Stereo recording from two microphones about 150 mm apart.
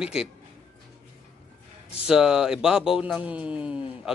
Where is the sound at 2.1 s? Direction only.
5° right (ahead or behind).